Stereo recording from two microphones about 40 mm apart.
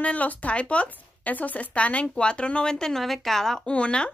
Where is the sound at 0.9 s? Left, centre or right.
Left; by 3.6 s centre.